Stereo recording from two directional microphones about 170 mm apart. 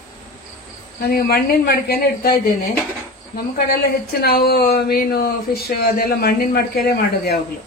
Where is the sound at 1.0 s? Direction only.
60° left (ahead or behind).